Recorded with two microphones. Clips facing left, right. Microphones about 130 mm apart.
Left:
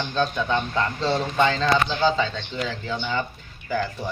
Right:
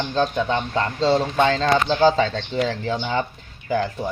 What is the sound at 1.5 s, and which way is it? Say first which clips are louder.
Speech: right 3 dB; 45° right (ahead or behind).